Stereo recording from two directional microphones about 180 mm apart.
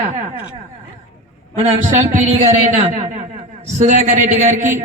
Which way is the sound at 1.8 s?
40° right (ahead or behind).